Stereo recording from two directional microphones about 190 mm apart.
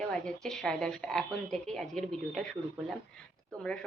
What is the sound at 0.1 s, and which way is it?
Speech, 5° left (ahead or behind).